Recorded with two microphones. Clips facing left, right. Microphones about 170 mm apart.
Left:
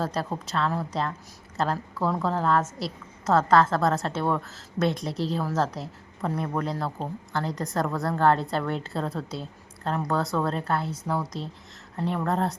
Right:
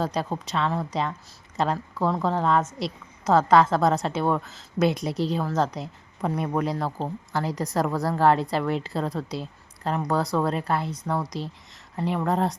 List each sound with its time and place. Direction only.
0.0 s a woman's voice: 5° left (ahead or behind)
6.2 s speech: 15° right (ahead or behind)
6.7 s a woman's voice: centre (ahead or behind)